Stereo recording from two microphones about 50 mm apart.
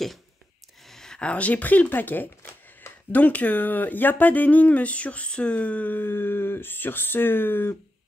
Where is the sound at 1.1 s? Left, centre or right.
Left.